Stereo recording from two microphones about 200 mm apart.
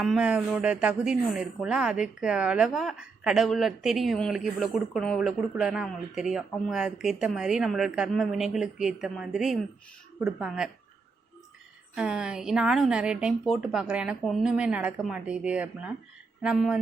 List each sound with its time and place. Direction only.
0.0 s speech: 5° right (ahead or behind)
11.9 s speech: 5° right (ahead or behind)